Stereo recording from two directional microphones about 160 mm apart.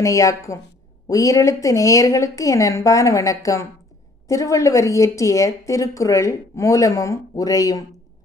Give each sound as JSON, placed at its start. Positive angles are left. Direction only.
{"t": 0.0, "sound": "a woman's voice", "side_deg": 20}